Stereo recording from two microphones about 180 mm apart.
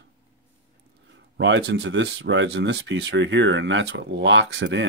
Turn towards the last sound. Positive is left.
turn(degrees=-85)